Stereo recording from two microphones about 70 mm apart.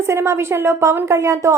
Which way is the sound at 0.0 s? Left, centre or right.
Right.